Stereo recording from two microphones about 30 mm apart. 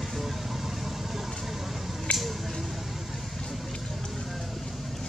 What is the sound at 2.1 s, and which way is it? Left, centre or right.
Squish, left.